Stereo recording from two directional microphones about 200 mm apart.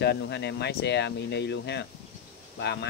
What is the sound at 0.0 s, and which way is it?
Speech, 55° left (ahead or behind).